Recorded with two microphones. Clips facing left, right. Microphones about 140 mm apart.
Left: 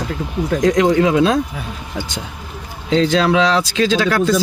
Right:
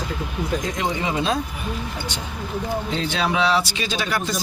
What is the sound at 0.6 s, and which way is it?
Speech, 90° left.